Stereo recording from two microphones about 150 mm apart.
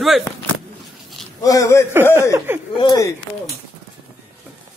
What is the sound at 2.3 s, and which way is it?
Speech, 15° right (ahead or behind).